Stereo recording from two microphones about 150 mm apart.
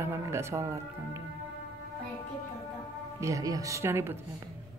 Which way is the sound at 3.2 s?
20° right (ahead or behind).